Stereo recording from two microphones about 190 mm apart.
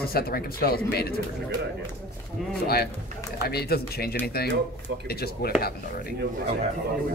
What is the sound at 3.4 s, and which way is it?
Speech, 55° left (ahead or behind).